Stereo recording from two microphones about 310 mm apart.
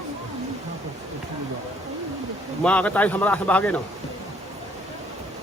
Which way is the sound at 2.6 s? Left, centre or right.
Centre.